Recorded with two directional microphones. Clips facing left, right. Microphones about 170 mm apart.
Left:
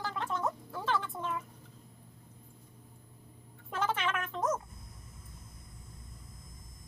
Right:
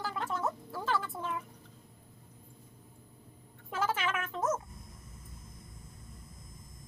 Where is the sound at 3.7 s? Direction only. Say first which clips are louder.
Even; 5° right (ahead or behind).